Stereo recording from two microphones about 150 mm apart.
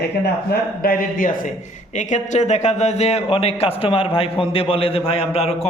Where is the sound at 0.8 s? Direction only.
70° left (ahead or behind).